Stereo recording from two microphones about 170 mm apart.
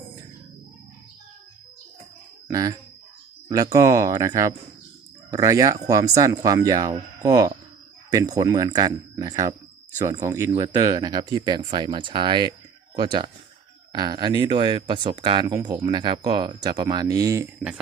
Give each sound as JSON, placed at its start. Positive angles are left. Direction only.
{"t": 2.5, "sound": "speech", "side_deg": -20}